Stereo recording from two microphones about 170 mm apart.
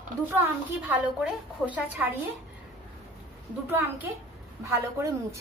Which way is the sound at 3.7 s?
10° right (ahead or behind).